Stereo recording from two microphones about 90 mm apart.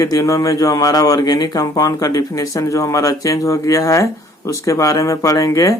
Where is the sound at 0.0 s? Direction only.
40° left (ahead or behind).